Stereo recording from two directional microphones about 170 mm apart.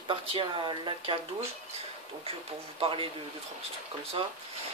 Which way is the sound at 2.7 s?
30° right (ahead or behind).